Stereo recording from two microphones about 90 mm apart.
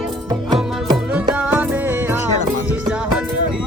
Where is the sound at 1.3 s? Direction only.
15° right (ahead or behind).